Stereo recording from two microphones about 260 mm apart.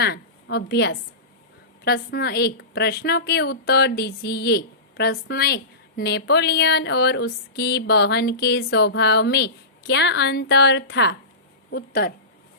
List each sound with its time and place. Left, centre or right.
0.0 s a woman's voice: left